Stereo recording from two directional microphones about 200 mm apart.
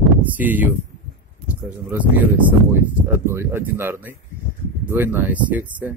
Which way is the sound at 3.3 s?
10° right (ahead or behind).